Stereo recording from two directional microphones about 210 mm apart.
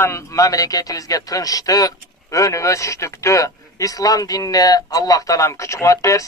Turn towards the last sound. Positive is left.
turn(degrees=15)  # may be behind; listen again after turning